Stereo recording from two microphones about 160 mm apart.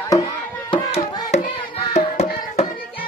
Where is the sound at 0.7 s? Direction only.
40° left (ahead or behind).